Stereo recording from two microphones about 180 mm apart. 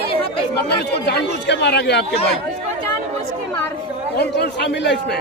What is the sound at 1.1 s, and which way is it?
Speech, 70° left (ahead or behind).